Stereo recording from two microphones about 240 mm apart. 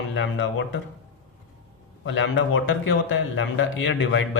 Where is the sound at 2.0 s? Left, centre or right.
Left.